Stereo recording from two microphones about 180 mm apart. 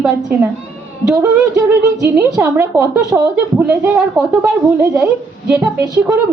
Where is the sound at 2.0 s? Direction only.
10° right (ahead or behind).